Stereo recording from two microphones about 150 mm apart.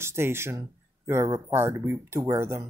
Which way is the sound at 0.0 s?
15° right (ahead or behind).